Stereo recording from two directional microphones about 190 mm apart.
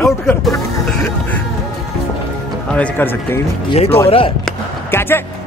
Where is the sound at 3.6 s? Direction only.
30° left (ahead or behind).